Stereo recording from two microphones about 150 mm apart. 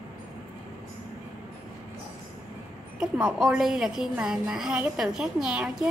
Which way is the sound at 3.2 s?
5° right (ahead or behind).